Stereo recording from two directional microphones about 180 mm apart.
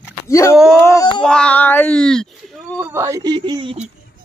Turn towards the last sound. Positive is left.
turn(degrees=-25)  # may be behind; listen again after turning